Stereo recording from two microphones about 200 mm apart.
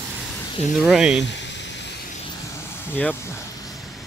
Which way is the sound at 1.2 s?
65° left (ahead or behind).